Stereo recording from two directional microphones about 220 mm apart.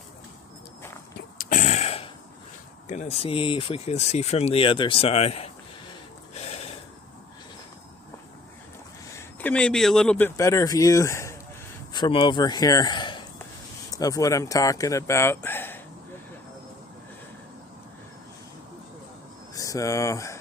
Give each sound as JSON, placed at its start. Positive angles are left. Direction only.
{"t": 1.4, "sound": "a sound", "side_deg": 35}
{"t": 2.9, "sound": "speech", "side_deg": 30}
{"t": 6.3, "sound": "snort", "side_deg": 30}
{"t": 9.1, "sound": "speech", "side_deg": 5}
{"t": 19.5, "sound": "speech", "side_deg": 15}